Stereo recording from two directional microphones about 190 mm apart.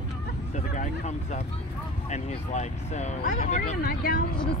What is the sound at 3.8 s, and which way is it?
Speech, 50° left (ahead or behind).